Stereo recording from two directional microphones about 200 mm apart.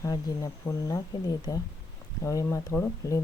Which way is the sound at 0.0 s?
15° left (ahead or behind).